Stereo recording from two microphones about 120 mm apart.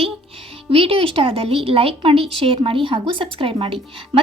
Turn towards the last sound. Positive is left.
turn(degrees=-50)  # may be behind; listen again after turning